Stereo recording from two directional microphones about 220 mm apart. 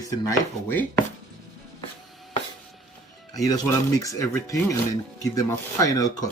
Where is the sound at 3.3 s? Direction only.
15° left (ahead or behind).